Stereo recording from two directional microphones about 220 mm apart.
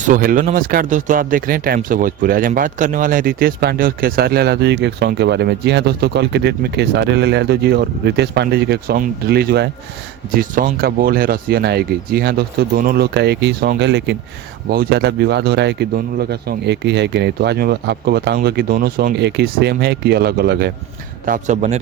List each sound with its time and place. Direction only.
0.1 s a man's voice: 40° right (ahead or behind)